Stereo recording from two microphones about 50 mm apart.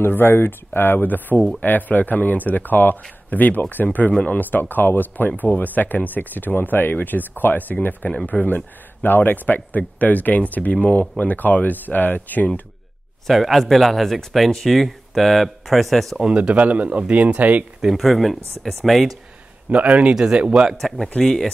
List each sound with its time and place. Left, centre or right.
0.0 s speech: left
13.3 s speech: centre
16.3 s speech: right
17.8 s speech: centre
19.7 s speech: right
21.2 s speech: centre